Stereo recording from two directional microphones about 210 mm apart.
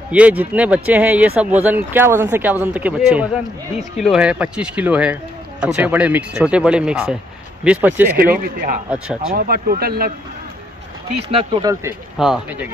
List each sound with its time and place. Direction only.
0.1 s speech: 5° right (ahead or behind)
8.2 s speech: 45° right (ahead or behind)
8.9 s speech: 5° right (ahead or behind)
9.3 s speech: 45° right (ahead or behind)
11.2 s speech: 25° right (ahead or behind)
12.2 s speech: 5° right (ahead or behind)